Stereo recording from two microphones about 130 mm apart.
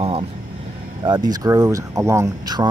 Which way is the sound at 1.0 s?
35° right (ahead or behind).